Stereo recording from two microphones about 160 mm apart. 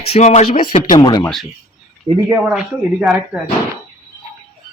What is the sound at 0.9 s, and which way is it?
Speech, 25° left (ahead or behind).